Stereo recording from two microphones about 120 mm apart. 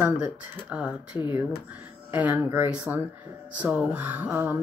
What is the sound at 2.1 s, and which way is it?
Speech, 15° right (ahead or behind).